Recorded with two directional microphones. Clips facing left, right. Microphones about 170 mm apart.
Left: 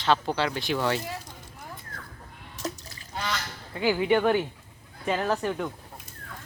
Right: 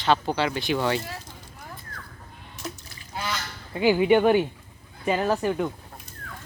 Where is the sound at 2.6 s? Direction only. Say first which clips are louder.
Left 3 dB; 40° left (ahead or behind).